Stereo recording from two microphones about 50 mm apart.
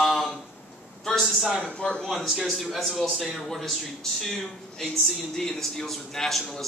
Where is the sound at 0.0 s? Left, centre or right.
Centre.